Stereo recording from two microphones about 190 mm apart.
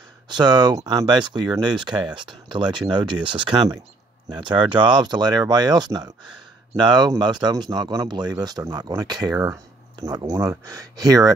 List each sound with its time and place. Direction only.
0.3 s speech: 25° right (ahead or behind)